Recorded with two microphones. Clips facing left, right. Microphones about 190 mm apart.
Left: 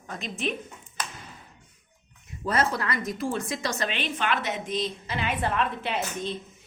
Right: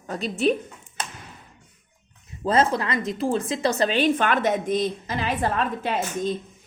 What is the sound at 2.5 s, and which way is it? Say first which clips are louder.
A woman's voice: right 5 dB; 25° right (ahead or behind).